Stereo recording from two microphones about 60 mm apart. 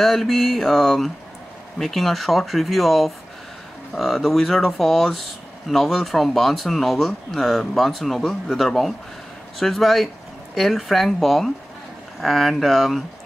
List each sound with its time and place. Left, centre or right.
0.0 s speech: centre